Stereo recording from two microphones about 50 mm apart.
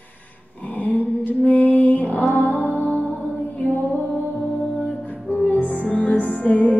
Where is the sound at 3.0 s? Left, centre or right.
Left.